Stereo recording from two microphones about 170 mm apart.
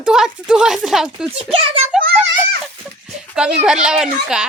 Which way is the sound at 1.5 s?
35° right (ahead or behind).